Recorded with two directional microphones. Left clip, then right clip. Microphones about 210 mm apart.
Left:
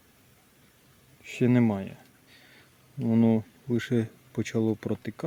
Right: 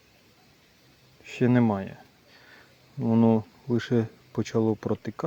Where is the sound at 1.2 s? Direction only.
5° right (ahead or behind).